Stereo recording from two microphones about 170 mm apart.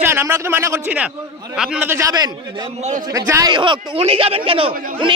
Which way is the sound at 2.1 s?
25° right (ahead or behind).